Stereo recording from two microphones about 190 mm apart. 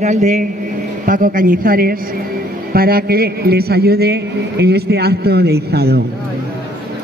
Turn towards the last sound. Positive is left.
turn(degrees=-55)  # may be behind; listen again after turning